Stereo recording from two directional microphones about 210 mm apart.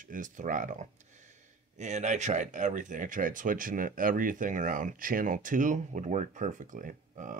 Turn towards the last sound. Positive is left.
turn(degrees=-40)  # may be behind; listen again after turning